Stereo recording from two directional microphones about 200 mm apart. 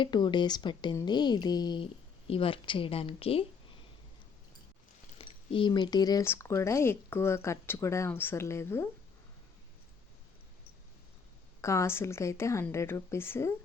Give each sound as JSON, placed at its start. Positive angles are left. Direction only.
{"t": 0.0, "sound": "speech", "side_deg": 20}
{"t": 5.1, "sound": "speech", "side_deg": 25}
{"t": 11.6, "sound": "speech", "side_deg": 15}